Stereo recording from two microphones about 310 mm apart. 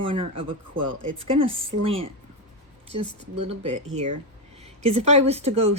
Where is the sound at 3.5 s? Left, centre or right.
Right.